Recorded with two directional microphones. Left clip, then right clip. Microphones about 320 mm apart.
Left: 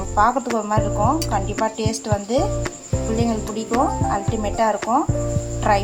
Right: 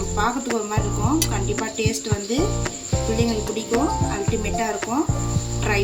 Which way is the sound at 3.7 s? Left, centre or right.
Centre.